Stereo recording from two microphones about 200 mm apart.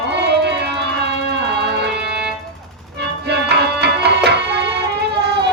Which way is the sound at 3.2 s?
55° right (ahead or behind).